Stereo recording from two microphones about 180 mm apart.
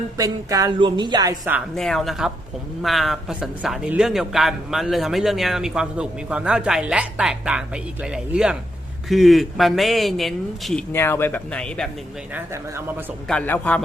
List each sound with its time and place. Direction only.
0.2 s speech: 20° right (ahead or behind)
1.7 s speech: centre (ahead or behind)
10.9 s speech: 15° left (ahead or behind)
13.2 s speech: 5° left (ahead or behind)